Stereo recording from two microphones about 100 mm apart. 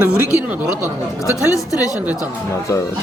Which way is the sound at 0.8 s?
35° left (ahead or behind).